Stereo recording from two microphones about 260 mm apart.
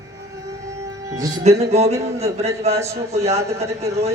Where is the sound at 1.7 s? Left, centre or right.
Right.